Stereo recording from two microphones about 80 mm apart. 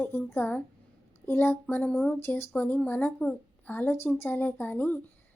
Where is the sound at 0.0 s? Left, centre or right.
Left.